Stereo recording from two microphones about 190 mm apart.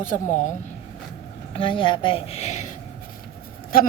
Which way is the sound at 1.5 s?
25° left (ahead or behind).